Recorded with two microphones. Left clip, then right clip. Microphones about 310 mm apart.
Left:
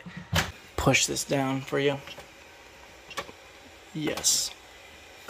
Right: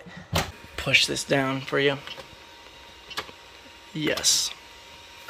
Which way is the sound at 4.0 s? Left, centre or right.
Centre.